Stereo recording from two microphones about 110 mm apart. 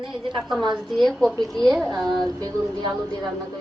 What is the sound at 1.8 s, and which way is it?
A woman's voice, 35° right (ahead or behind).